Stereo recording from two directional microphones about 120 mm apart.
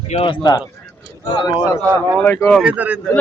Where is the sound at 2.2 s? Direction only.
15° left (ahead or behind).